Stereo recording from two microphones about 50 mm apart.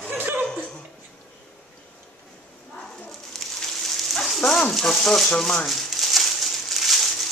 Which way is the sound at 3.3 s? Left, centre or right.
Centre.